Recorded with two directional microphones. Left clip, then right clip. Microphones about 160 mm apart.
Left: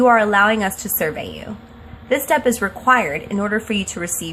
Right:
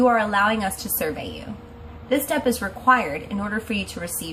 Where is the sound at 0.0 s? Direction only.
60° left (ahead or behind).